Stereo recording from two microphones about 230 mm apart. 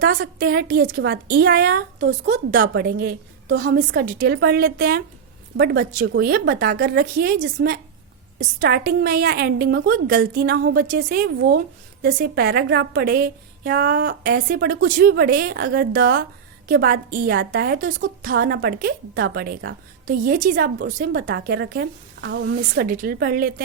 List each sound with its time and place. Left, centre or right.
0.0 s a woman's voice: right